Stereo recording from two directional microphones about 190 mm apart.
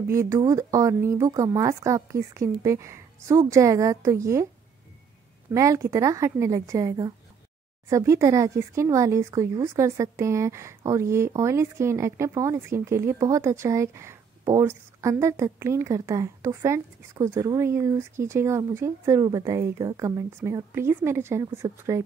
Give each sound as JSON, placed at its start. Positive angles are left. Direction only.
{"t": 0.0, "sound": "speech", "side_deg": -15}
{"t": 5.5, "sound": "speech", "side_deg": -15}